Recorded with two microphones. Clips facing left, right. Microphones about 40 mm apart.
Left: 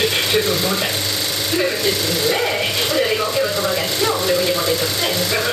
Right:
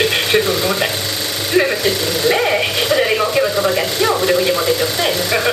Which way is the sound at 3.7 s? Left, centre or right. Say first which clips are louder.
Right 3 dB; right.